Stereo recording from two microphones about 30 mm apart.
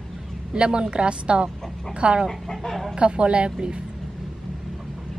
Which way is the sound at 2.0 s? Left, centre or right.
Right.